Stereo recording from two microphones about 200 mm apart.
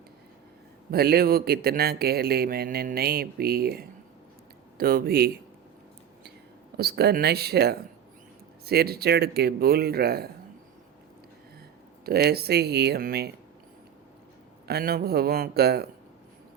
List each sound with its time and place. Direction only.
0.9 s a man's voice: 50° right (ahead or behind)
6.7 s a man's voice: 50° right (ahead or behind)
12.0 s a man's voice: 50° right (ahead or behind)
14.7 s a man's voice: 50° right (ahead or behind)